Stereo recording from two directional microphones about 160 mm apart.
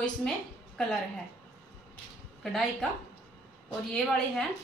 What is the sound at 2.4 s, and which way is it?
Speech, centre (ahead or behind).